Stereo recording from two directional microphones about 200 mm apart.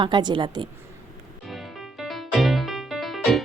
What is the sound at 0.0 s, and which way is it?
Speech, 20° right (ahead or behind).